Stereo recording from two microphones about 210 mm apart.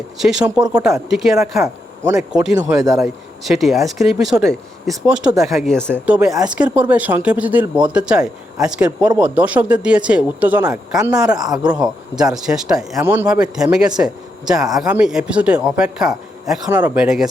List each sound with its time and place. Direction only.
0.2 s speech: 5° right (ahead or behind)
1.6 s speech: 15° right (ahead or behind)
3.0 s speech: centre (ahead or behind)
11.3 s speech: 20° right (ahead or behind)
12.2 s speech: centre (ahead or behind)